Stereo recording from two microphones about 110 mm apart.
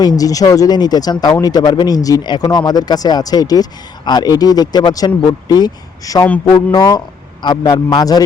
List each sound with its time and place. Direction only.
0.0 s speech: 35° left (ahead or behind)